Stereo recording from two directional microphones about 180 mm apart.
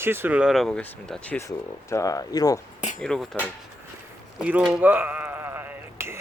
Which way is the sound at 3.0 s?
5° left (ahead or behind).